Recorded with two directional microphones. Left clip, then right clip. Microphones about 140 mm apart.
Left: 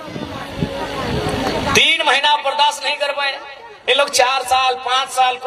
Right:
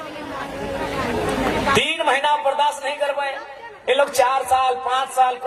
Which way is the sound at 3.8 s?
25° left (ahead or behind).